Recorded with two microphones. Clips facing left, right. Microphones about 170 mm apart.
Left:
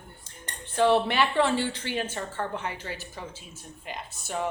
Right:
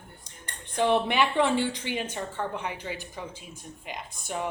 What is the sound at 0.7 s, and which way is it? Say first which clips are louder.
A woman's voice: left 1 dB; 15° right (ahead or behind).